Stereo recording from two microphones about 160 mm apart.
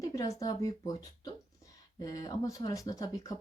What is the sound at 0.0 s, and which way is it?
Speech, 20° left (ahead or behind).